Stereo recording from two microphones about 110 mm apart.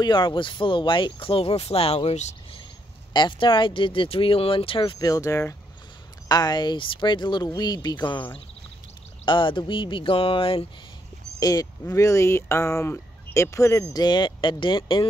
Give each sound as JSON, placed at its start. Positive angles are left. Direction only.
{"t": 0.0, "sound": "speech", "side_deg": 45}
{"t": 3.1, "sound": "speech", "side_deg": 45}
{"t": 4.9, "sound": "speech", "side_deg": 35}
{"t": 11.3, "sound": "speech", "side_deg": 35}
{"t": 14.0, "sound": "speech", "side_deg": 45}